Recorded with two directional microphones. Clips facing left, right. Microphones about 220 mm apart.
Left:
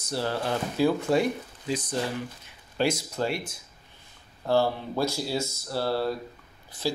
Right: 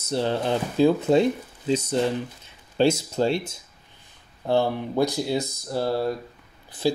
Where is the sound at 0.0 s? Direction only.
25° right (ahead or behind).